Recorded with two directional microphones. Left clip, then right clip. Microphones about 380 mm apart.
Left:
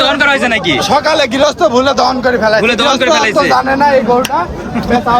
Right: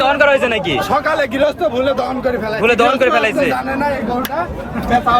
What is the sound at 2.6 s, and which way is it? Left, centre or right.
Speech, centre.